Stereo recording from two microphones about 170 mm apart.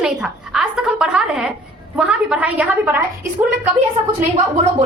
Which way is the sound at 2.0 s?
5° right (ahead or behind).